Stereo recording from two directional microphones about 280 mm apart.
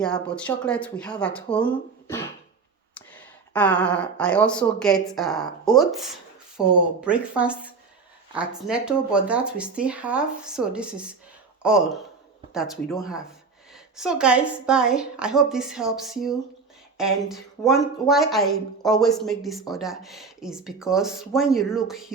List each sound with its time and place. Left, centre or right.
0.0 s speech: centre